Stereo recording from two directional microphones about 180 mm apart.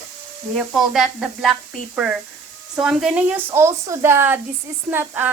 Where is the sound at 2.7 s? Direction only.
5° right (ahead or behind).